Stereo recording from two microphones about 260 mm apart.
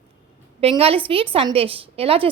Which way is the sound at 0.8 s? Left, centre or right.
Right.